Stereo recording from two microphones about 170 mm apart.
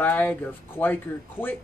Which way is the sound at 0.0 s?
10° left (ahead or behind).